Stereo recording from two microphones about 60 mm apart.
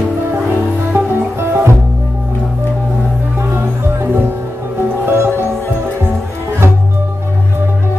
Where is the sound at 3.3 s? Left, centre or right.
Right.